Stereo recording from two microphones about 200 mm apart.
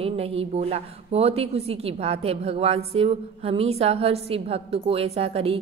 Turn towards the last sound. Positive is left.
turn(degrees=-30)  # may be behind; listen again after turning